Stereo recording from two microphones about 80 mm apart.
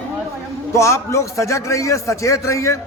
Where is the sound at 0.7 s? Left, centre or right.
Left.